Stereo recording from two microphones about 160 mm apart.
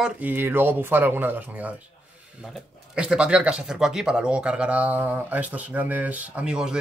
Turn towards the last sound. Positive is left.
turn(degrees=-5)  # may be behind; listen again after turning